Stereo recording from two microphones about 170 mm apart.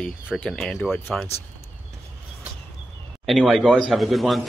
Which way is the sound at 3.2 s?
Centre (ahead or behind).